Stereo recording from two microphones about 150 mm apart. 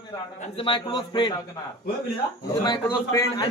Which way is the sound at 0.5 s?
35° left (ahead or behind).